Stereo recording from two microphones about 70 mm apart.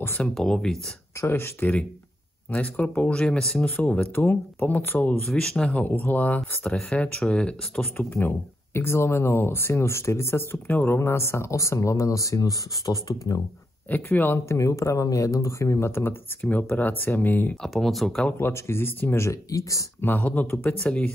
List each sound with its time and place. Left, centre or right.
0.2 s speech: centre
1.2 s speech: left
2.5 s speech: centre
3.7 s speech: left
5.2 s speech: centre
5.9 s speech: left
6.7 s speech: centre
8.1 s speech: left
13.8 s speech: left
14.5 s speech: left
17.6 s speech: centre
18.4 s speech: left
19.2 s speech: left
20.0 s speech: left